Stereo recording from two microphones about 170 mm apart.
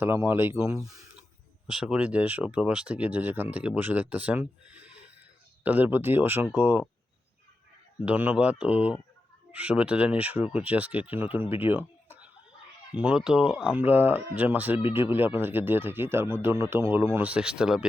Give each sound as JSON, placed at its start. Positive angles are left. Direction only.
{"t": 0.0, "sound": "speech", "side_deg": -15}
{"t": 1.6, "sound": "speech", "side_deg": -5}
{"t": 8.0, "sound": "speech", "side_deg": -10}